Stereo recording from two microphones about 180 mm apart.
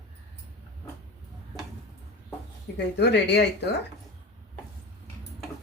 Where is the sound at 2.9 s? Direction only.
70° left (ahead or behind).